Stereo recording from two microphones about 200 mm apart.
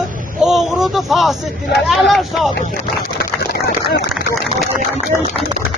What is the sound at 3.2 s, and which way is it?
Speech, 50° left (ahead or behind).